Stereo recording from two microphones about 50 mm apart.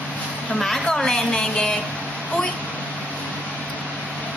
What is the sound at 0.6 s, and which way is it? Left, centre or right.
A woman's voice, centre.